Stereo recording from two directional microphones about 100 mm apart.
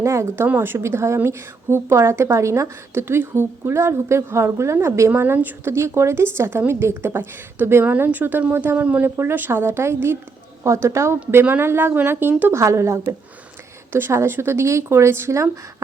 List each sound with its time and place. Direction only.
0.0 s a woman's voice: 30° right (ahead or behind)